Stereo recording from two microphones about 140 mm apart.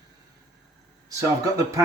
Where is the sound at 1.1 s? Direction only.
25° right (ahead or behind).